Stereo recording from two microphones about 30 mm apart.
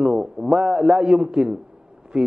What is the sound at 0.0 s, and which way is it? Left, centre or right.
A man's voice, right.